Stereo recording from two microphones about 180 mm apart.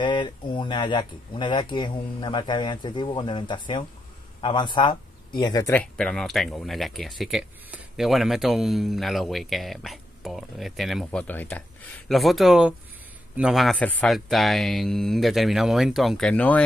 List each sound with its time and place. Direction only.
0.0 s speech: 25° left (ahead or behind); by 16.6 s 10° left (ahead or behind)